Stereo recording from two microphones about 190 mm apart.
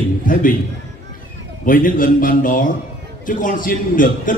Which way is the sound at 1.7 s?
45° left (ahead or behind).